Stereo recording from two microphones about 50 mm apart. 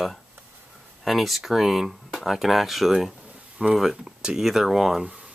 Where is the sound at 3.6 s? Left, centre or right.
Centre.